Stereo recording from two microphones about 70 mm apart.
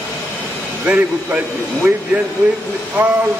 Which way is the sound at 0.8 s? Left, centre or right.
Right.